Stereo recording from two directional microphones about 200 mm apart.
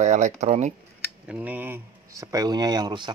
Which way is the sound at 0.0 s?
35° right (ahead or behind).